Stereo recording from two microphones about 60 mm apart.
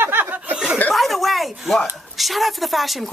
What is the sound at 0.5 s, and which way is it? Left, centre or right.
Chuckle, centre.